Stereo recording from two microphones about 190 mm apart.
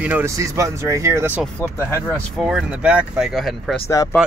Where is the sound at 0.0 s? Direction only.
10° right (ahead or behind).